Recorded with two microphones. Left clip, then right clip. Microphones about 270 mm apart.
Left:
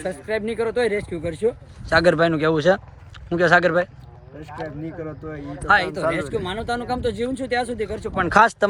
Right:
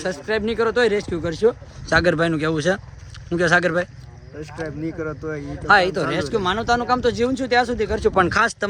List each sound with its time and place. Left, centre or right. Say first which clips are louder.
0.0 s speech: right 2 dB; centre
5.6 s speech: right 2 dB; centre
8.3 s speech: left 4 dB; centre